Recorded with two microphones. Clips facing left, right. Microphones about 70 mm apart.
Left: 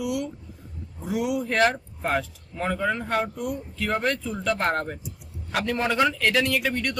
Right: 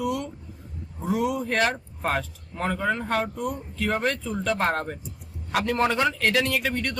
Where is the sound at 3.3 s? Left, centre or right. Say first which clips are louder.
Even; right.